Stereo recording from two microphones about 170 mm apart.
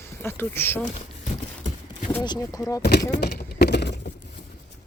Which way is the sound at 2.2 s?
25° left (ahead or behind).